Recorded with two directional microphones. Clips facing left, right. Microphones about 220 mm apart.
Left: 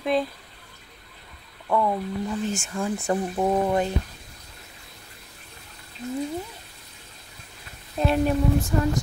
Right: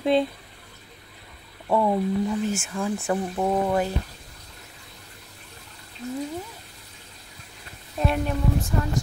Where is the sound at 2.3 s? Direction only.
5° right (ahead or behind).